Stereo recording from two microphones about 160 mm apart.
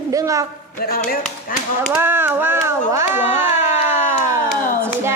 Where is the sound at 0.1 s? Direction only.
20° right (ahead or behind).